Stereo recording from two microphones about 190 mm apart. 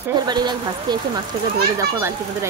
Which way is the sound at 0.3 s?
25° right (ahead or behind).